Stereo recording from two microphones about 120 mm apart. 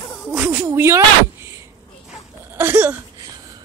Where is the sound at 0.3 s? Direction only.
20° right (ahead or behind).